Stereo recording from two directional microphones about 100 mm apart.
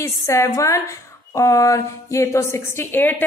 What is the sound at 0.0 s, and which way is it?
A woman's voice, 30° left (ahead or behind).